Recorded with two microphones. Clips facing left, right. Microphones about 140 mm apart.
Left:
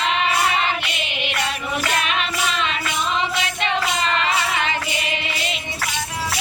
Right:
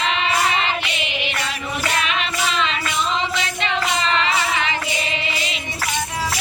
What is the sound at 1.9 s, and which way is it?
Music, 45° left (ahead or behind).